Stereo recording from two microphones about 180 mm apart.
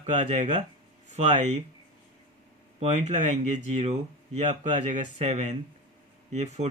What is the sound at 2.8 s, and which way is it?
Speech, 40° right (ahead or behind).